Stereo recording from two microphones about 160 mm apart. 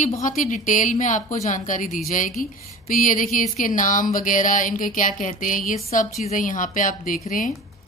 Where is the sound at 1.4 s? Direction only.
55° left (ahead or behind).